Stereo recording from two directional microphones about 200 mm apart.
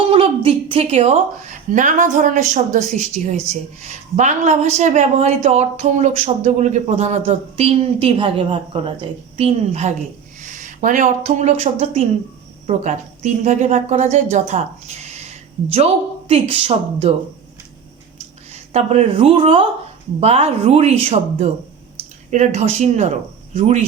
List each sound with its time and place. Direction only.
0.1 s a woman's voice: 30° right (ahead or behind)
16.3 s a woman's voice: 30° right (ahead or behind)
18.5 s a woman's voice: 35° right (ahead or behind)